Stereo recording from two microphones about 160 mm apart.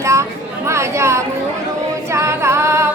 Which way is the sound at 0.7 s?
15° right (ahead or behind).